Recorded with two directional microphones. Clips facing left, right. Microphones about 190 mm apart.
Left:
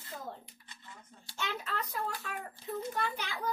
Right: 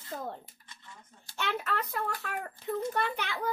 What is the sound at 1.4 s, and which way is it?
Speech, 65° right (ahead or behind).